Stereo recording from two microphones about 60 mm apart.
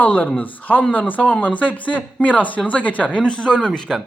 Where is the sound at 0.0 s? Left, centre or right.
Left.